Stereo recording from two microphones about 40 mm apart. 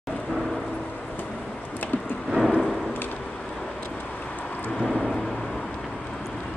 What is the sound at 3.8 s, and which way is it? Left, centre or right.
Vehicle, left.